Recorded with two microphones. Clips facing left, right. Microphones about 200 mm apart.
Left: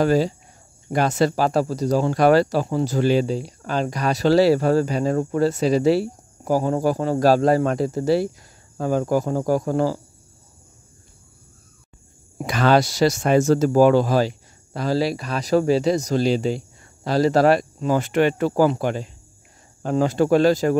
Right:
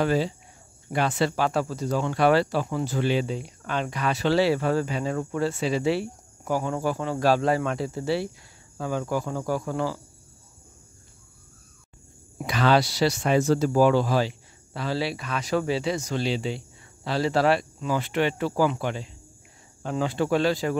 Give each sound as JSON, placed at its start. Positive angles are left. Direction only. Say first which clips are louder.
{"t": 0.0, "sound": "speech", "louder": "left 5 dB", "side_deg": 40}
{"t": 12.4, "sound": "speech", "louder": "left 4 dB", "side_deg": 45}